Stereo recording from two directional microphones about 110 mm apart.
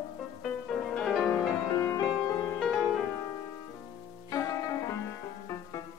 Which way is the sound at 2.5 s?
Centre (ahead or behind).